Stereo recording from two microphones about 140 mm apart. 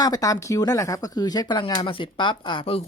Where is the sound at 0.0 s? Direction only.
25° left (ahead or behind).